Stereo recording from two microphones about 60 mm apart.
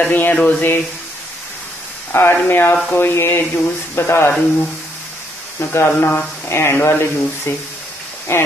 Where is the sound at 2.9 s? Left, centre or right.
Left.